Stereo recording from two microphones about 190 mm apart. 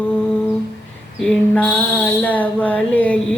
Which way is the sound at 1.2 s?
5° left (ahead or behind).